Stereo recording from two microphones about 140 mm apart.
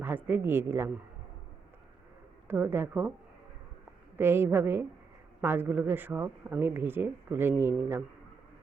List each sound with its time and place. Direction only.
0.0 s speech: 15° right (ahead or behind)
2.5 s speech: 15° right (ahead or behind)
4.2 s speech: 15° right (ahead or behind)